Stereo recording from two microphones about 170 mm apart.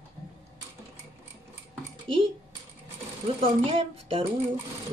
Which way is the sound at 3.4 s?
35° right (ahead or behind).